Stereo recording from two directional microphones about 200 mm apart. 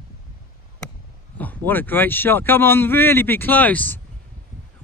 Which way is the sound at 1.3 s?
10° left (ahead or behind).